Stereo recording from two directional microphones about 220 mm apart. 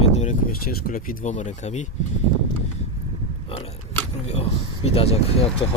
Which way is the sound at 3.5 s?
25° left (ahead or behind).